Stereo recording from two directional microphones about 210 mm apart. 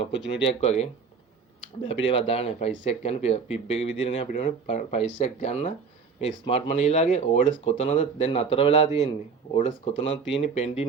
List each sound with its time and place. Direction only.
0.1 s speech: 60° left (ahead or behind)
0.4 s speech: 30° left (ahead or behind)
2.0 s speech: 25° left (ahead or behind)
10.1 s speech: 60° left (ahead or behind)
10.5 s speech: 30° left (ahead or behind)